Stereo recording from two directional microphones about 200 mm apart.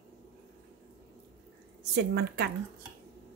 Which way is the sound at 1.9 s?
55° right (ahead or behind).